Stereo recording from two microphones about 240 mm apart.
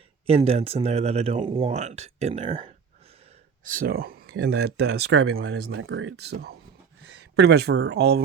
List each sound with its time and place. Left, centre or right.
0.3 s speech: right